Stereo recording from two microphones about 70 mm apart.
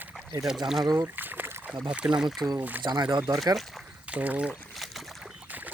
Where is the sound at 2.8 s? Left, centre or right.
Right.